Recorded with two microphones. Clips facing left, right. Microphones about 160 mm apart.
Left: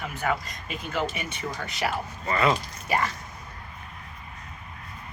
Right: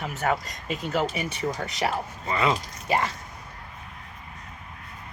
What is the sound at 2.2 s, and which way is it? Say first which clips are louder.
Speech: left 1 dB; 15° right (ahead or behind).